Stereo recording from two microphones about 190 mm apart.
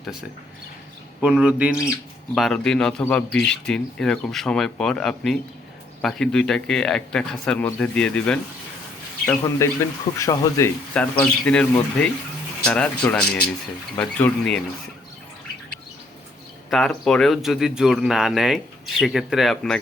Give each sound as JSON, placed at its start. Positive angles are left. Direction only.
{"t": 0.0, "sound": "speech", "side_deg": 0}
{"t": 11.2, "sound": "speech", "side_deg": 5}
{"t": 16.6, "sound": "speech", "side_deg": 0}